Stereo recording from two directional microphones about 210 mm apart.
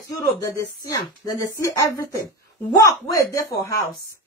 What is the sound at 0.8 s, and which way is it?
Speech, 15° left (ahead or behind).